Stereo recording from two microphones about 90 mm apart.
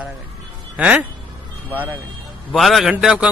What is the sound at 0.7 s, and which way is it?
Speech, 15° right (ahead or behind).